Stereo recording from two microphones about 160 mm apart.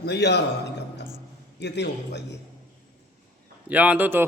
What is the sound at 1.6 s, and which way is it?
Speech, 90° left.